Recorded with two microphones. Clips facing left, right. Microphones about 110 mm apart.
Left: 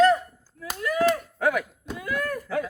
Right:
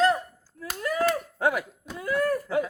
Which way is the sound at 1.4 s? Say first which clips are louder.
Left 1 dB; 30° right (ahead or behind).